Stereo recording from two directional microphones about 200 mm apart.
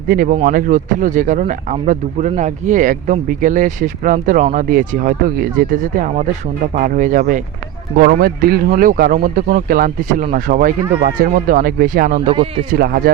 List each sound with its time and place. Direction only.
0.1 s speech: 45° right (ahead or behind)
12.3 s speech: 30° right (ahead or behind)
12.7 s speech: 50° right (ahead or behind)